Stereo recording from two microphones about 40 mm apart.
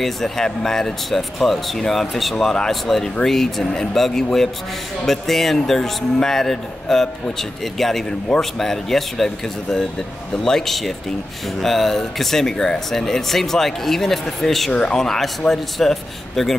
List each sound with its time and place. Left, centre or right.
0.0 s speech: centre
2.3 s speech: centre
2.7 s speech: centre
14.7 s speech: left
15.0 s speech: centre